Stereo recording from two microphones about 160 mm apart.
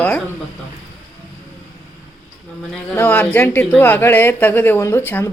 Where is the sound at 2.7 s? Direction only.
10° left (ahead or behind).